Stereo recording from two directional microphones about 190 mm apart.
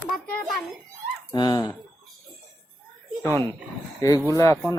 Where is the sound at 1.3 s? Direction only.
20° left (ahead or behind).